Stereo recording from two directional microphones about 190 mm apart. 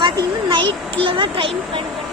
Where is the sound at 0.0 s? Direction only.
25° right (ahead or behind).